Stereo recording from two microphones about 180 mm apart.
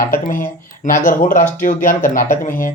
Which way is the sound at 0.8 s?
45° left (ahead or behind).